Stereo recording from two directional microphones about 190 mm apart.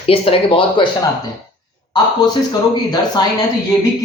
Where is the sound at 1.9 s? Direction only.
20° left (ahead or behind).